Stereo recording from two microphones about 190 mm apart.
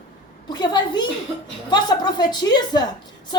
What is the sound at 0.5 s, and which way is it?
A woman's voice, 25° left (ahead or behind).